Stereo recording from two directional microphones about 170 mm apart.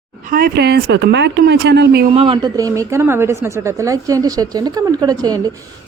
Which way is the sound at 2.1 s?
30° right (ahead or behind).